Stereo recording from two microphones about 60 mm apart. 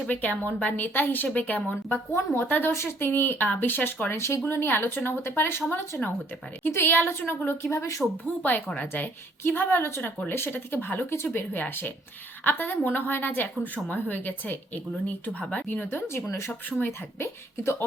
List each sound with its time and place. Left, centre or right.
0.1 s a woman's voice: left
2.1 s speech: left
2.5 s speech: left
2.7 s speech: left
6.7 s speech: left
8.4 s a woman's voice: left
15.7 s a woman's voice: left